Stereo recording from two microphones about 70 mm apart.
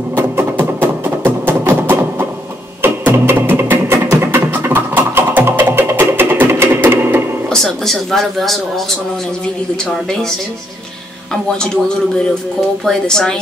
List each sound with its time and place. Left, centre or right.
0.1 s music: right
7.4 s speech: centre
12.8 s a woman's voice: centre